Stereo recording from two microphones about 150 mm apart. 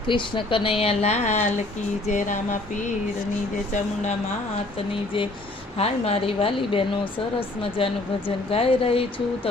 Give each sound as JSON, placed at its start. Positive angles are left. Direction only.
{"t": 0.1, "sound": "speech", "side_deg": 35}
{"t": 2.0, "sound": "a sound", "side_deg": 55}
{"t": 5.7, "sound": "speech", "side_deg": 40}